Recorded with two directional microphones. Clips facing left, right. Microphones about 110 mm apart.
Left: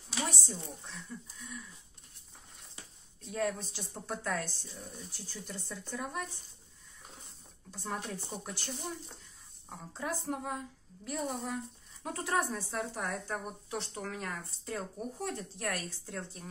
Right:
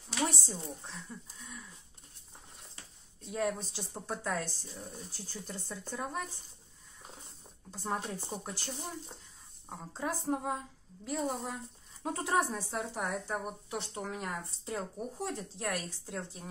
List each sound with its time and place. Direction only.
0.5 s speech: 30° right (ahead or behind)
3.3 s speech: 20° right (ahead or behind)
7.7 s speech: 30° right (ahead or behind)
12.7 s speech: 5° right (ahead or behind)